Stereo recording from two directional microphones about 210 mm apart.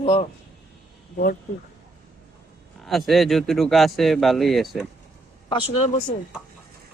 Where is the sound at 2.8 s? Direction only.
Centre (ahead or behind).